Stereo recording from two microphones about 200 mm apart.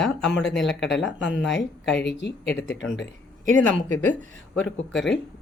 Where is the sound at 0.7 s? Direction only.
60° left (ahead or behind).